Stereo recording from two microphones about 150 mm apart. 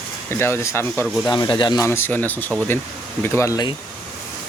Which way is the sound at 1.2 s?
30° left (ahead or behind).